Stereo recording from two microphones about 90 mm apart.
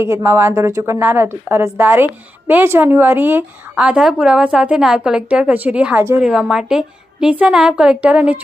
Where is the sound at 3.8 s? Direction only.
10° right (ahead or behind).